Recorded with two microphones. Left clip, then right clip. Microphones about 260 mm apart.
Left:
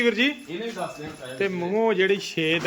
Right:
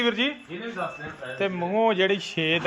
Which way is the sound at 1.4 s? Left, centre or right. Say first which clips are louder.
Even; centre.